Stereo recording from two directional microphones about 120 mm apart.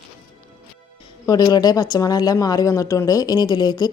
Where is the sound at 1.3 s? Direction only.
35° left (ahead or behind).